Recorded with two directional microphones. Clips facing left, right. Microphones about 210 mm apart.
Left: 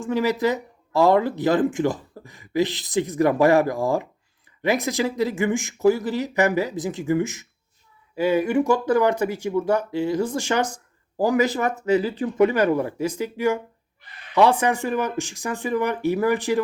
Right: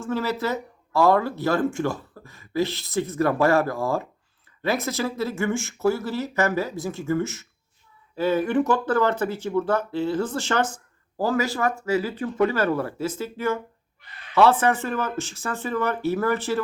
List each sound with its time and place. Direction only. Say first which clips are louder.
0.0 s speech: left 4 dB; 15° left (ahead or behind)